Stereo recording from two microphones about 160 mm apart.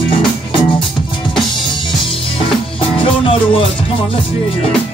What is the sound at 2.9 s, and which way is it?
Music, 35° left (ahead or behind).